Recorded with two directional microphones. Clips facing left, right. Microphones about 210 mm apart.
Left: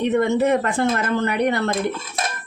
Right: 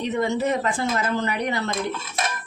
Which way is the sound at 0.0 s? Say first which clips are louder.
Left 5 dB; 60° left (ahead or behind).